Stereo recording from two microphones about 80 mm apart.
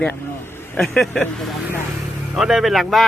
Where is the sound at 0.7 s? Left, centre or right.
Centre.